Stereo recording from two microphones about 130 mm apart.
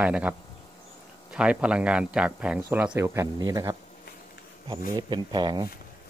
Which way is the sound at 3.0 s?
20° right (ahead or behind).